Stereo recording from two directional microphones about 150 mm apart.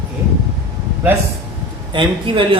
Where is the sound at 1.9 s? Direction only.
35° right (ahead or behind).